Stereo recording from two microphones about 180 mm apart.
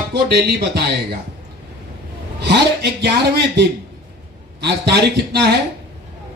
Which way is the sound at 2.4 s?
65° right (ahead or behind).